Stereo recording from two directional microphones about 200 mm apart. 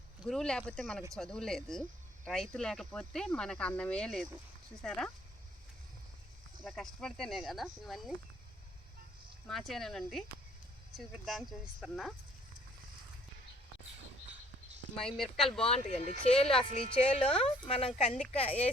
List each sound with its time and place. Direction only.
0.2 s speech: centre (ahead or behind)
6.7 s speech: centre (ahead or behind)
9.5 s speech: centre (ahead or behind)
14.9 s speech: centre (ahead or behind)
15.6 s a woman's voice: 30° left (ahead or behind)